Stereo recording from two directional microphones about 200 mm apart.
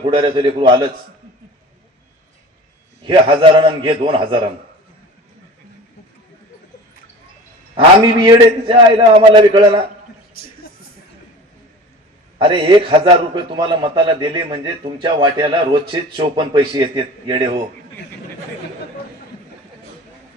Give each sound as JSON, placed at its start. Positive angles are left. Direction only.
{"t": 0.0, "sound": "a man's voice", "side_deg": -25}
{"t": 3.1, "sound": "a man's voice", "side_deg": -25}
{"t": 7.8, "sound": "a man's voice", "side_deg": -25}
{"t": 12.4, "sound": "a man's voice", "side_deg": -25}